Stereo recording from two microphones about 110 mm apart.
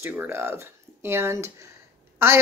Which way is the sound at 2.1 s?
25° right (ahead or behind).